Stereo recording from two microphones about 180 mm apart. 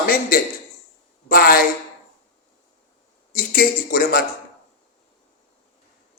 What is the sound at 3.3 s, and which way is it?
Speech, 55° left (ahead or behind).